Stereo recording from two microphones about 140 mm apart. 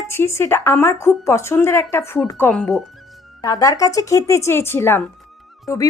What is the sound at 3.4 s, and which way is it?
A woman's voice, 25° left (ahead or behind).